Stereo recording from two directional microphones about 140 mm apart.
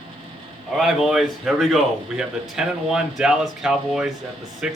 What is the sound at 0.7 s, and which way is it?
A man's voice, centre (ahead or behind).